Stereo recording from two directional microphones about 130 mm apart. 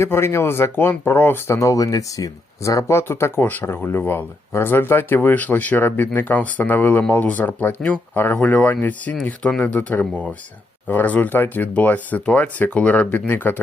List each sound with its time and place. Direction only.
0.0 s speech: 20° left (ahead or behind)